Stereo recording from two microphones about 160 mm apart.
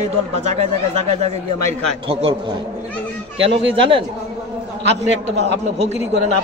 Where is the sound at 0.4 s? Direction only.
45° right (ahead or behind).